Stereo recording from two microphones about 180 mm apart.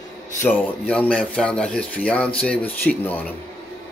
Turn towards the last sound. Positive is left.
turn(degrees=10)  # may be behind; listen again after turning